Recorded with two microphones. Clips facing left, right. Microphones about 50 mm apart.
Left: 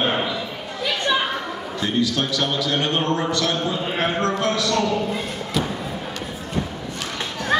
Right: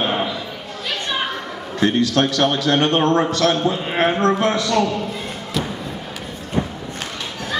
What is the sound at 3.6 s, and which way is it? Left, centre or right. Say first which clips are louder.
Speech: right 4 dB; right.